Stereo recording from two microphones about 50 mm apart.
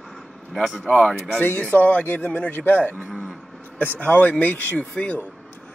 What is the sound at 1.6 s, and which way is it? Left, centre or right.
Speech, left.